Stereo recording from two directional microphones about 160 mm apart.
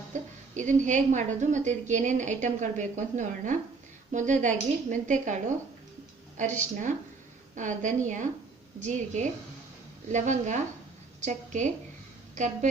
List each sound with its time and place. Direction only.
0.1 s a woman's voice: 50° right (ahead or behind)